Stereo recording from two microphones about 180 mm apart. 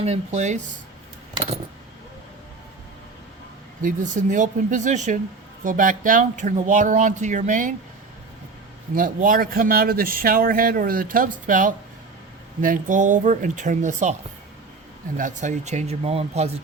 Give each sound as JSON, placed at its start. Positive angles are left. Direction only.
{"t": 0.0, "sound": "speech", "side_deg": -35}
{"t": 3.8, "sound": "speech", "side_deg": -45}
{"t": 9.0, "sound": "speech", "side_deg": -50}
{"t": 15.2, "sound": "speech", "side_deg": -45}